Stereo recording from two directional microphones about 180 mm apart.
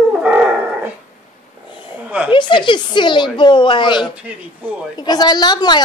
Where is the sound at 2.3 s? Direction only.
25° left (ahead or behind).